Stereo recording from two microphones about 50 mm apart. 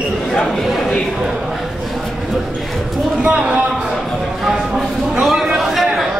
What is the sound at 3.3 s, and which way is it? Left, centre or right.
Speech, right.